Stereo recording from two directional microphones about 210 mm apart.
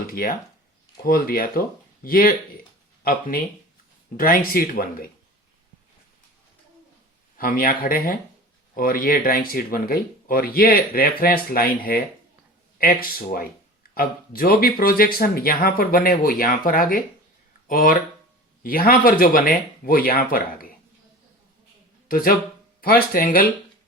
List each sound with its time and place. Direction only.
0.1 s speech: 40° left (ahead or behind)
7.3 s speech: 45° left (ahead or behind)
22.1 s speech: 45° left (ahead or behind)